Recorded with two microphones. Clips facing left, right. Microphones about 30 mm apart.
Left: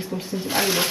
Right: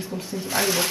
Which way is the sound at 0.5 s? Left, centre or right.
Centre.